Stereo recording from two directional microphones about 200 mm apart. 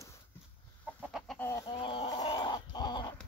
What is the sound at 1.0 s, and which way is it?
Chicken, centre (ahead or behind).